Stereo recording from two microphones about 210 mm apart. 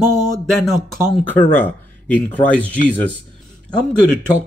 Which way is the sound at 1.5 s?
10° left (ahead or behind).